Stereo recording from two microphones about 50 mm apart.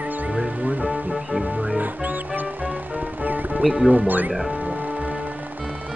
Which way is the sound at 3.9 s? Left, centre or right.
Right.